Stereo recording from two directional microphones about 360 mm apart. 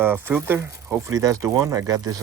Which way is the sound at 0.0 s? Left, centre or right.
Centre.